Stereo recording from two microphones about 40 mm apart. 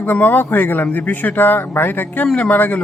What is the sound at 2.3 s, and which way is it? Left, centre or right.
Speech, left.